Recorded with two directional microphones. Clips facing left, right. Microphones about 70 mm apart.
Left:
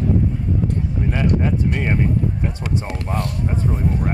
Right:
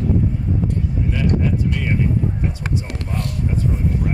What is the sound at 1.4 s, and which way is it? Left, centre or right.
Speech, left.